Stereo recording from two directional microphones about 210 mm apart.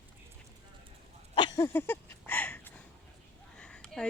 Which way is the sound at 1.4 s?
15° left (ahead or behind).